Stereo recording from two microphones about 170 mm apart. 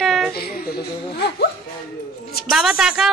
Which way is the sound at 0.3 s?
65° left (ahead or behind).